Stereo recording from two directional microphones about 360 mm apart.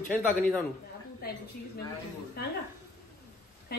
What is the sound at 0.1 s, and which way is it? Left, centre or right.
Speech, centre.